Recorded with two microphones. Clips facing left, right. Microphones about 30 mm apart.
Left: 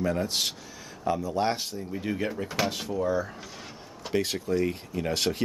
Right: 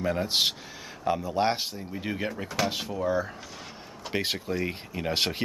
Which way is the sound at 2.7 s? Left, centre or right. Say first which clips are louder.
Even; centre.